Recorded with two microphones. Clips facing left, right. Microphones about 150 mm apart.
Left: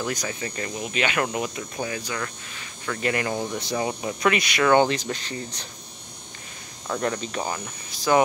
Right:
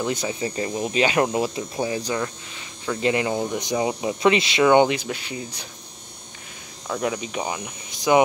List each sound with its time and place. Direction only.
0.0 s speech: 25° right (ahead or behind); by 5.7 s 10° right (ahead or behind)
6.9 s speech: 5° right (ahead or behind)